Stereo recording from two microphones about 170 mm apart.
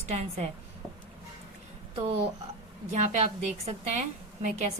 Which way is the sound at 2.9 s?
40° right (ahead or behind).